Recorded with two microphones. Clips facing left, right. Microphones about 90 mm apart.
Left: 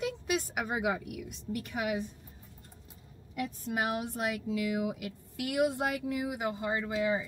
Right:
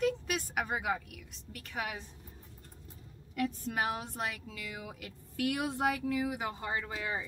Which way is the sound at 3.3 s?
15° left (ahead or behind).